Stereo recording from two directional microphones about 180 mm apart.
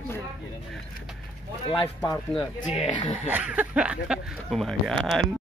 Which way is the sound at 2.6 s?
35° left (ahead or behind).